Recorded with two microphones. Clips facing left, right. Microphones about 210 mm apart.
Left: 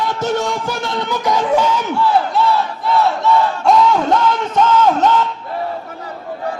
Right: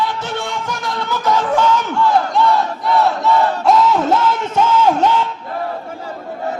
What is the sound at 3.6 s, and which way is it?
Music, centre (ahead or behind).